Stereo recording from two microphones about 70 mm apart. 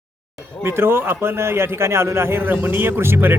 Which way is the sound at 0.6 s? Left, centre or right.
Right.